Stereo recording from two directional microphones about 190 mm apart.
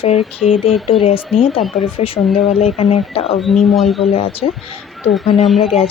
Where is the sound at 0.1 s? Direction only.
Centre (ahead or behind).